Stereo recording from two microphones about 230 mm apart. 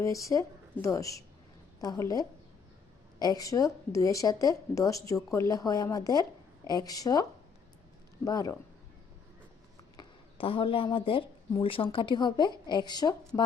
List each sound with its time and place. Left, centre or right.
0.0 s a woman's voice: centre
10.0 s speech: left